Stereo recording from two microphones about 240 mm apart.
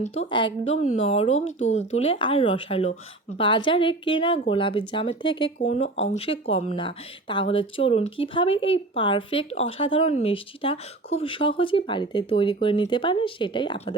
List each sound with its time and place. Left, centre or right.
0.0 s speech: left